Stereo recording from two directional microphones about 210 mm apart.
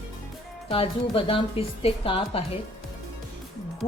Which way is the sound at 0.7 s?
25° left (ahead or behind).